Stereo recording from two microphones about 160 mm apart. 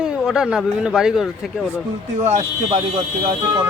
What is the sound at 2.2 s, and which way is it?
Speech, 45° right (ahead or behind).